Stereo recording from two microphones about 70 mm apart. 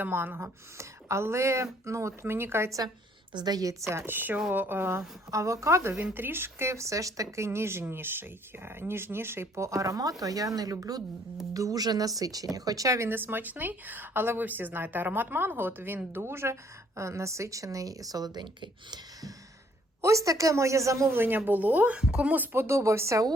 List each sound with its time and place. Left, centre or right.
0.0 s speech: right
0.8 s speech: right
3.3 s speech: right
4.1 s speech: right
6.1 s speech: right
13.1 s speech: right
20.0 s speech: right
21.1 s speech: right; by 22.3 s centre
22.3 s speech: right
22.6 s speech: right